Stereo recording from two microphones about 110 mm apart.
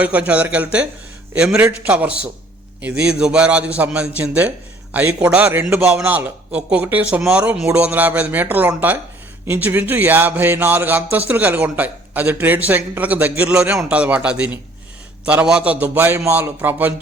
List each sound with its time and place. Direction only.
0.0 s a man's voice: 10° right (ahead or behind)